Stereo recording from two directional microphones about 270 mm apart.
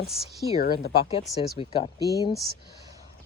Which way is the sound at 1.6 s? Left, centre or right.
Centre.